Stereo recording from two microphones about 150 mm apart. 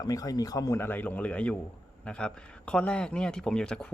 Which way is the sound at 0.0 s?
25° left (ahead or behind).